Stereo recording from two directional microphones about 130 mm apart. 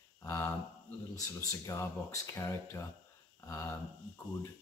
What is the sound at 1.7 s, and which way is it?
Speech, 20° left (ahead or behind).